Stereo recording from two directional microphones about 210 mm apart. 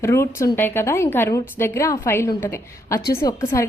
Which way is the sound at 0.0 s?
15° left (ahead or behind).